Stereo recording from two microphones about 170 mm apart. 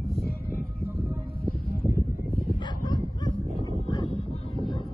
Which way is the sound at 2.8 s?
25° left (ahead or behind).